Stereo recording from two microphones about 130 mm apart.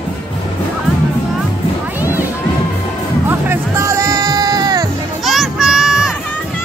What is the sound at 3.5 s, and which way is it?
Music, 20° right (ahead or behind).